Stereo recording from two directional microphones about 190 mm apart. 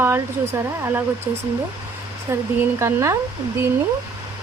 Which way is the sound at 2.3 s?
15° right (ahead or behind).